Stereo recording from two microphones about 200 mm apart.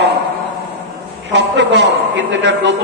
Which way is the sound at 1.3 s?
60° right (ahead or behind).